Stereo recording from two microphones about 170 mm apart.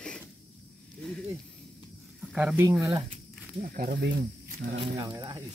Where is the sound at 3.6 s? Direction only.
55° right (ahead or behind).